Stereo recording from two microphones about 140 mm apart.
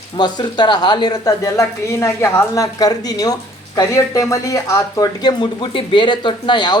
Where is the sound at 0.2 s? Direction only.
30° left (ahead or behind).